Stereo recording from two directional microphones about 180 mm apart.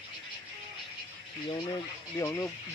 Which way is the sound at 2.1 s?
15° left (ahead or behind).